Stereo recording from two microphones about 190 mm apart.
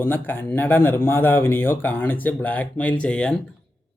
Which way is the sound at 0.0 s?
10° left (ahead or behind).